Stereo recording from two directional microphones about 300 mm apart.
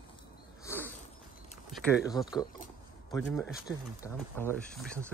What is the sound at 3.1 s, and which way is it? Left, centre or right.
Speech, centre.